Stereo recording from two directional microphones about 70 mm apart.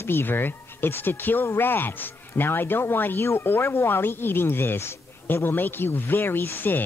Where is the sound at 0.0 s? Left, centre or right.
Left.